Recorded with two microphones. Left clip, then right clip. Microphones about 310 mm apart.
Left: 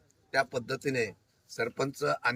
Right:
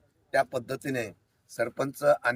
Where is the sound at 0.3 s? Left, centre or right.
Centre.